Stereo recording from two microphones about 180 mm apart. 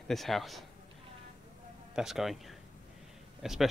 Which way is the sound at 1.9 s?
Centre (ahead or behind).